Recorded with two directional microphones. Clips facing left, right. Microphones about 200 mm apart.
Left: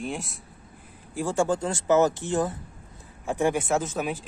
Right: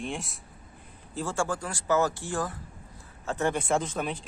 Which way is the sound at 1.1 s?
15° left (ahead or behind).